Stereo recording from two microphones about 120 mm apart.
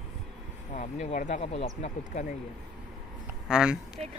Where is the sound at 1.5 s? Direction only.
70° left (ahead or behind).